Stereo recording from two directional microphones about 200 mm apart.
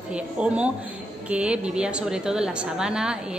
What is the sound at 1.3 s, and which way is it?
A woman's voice, 5° right (ahead or behind).